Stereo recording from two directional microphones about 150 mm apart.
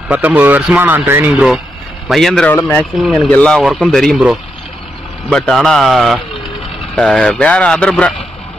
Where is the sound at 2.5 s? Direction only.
15° left (ahead or behind).